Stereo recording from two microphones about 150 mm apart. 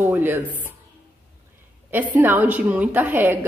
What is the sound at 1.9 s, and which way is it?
A woman's voice, 10° right (ahead or behind).